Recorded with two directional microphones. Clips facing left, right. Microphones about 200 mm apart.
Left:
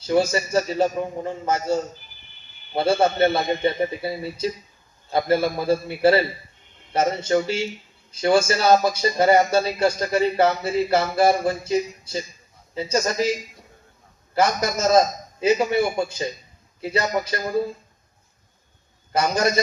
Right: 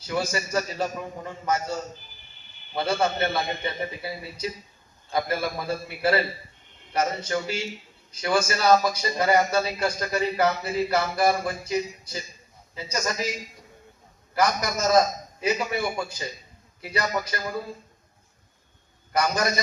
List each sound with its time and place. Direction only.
0.1 s a man's voice: 30° left (ahead or behind)
14.3 s a man's voice: 30° left (ahead or behind)
19.1 s a man's voice: 25° left (ahead or behind)